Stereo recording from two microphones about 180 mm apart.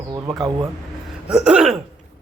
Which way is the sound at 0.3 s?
20° right (ahead or behind).